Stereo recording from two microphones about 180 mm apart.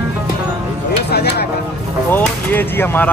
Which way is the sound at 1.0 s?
65° left (ahead or behind).